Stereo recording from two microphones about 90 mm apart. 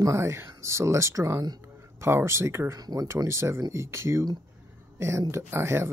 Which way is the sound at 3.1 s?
30° right (ahead or behind).